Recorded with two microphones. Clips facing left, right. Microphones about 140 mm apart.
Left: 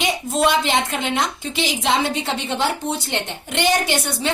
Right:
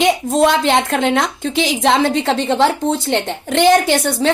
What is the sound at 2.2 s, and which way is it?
Speech, 90° right.